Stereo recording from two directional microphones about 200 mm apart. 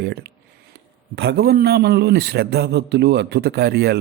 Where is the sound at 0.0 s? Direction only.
55° right (ahead or behind).